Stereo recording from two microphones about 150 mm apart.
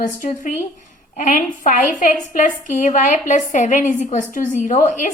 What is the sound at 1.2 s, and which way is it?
A woman's voice, 60° left (ahead or behind).